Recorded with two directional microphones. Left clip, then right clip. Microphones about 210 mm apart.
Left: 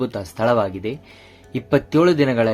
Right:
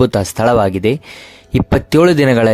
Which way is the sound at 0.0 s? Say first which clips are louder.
Right 8 dB; 50° right (ahead or behind).